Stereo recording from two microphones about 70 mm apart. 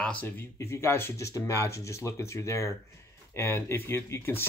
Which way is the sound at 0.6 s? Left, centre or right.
Left.